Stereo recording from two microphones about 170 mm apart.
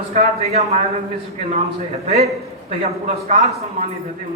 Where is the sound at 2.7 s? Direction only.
45° right (ahead or behind).